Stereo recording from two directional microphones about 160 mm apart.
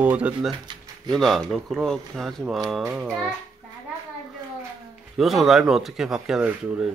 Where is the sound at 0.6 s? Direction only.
25° right (ahead or behind).